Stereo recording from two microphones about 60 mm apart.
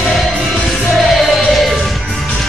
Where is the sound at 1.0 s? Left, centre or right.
Centre.